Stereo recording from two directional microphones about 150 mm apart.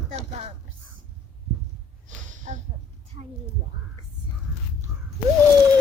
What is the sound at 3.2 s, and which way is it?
Speech, 35° right (ahead or behind).